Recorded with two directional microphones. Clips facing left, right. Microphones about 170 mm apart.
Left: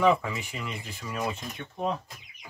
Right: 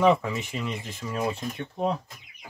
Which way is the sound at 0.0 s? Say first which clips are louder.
Right 2 dB; 20° right (ahead or behind).